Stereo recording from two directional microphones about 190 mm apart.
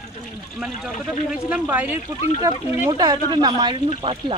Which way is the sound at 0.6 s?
5° right (ahead or behind).